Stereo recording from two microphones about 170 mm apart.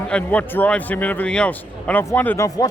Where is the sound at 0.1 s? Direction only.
10° left (ahead or behind).